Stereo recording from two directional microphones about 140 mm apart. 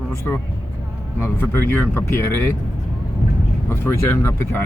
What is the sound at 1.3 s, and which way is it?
Speech, 15° left (ahead or behind).